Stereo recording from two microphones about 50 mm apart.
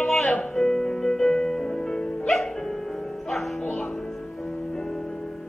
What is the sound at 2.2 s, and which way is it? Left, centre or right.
Music, centre.